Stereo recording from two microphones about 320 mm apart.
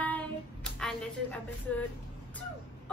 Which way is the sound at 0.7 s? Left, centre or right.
Centre.